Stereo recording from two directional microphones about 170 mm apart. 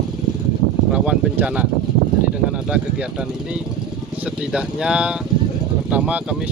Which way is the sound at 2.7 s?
5° right (ahead or behind).